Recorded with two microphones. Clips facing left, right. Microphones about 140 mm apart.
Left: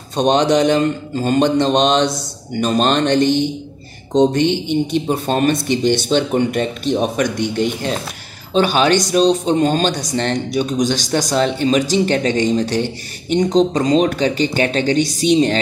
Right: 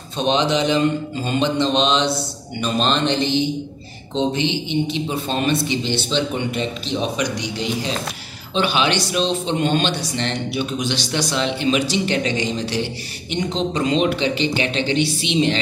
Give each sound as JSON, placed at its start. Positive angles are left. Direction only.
{"t": 0.1, "sound": "speech", "side_deg": 45}